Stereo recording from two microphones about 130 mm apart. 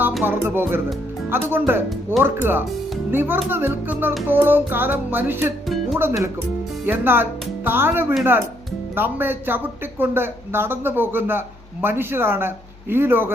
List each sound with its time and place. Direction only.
0.2 s speech: 15° right (ahead or behind)
5.6 s music: centre (ahead or behind)
6.8 s speech: 15° right (ahead or behind)